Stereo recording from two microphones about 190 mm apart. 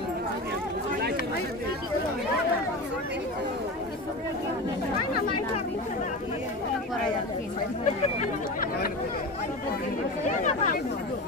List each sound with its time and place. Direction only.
10.2 s chatter: 40° left (ahead or behind)